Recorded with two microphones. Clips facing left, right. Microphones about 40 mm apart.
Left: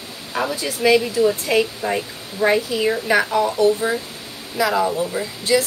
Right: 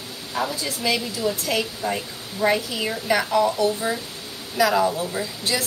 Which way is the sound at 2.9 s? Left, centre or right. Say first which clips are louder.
Left 3 dB; left.